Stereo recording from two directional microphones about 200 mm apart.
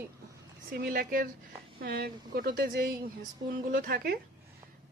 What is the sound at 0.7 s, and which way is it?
Speech, 50° right (ahead or behind).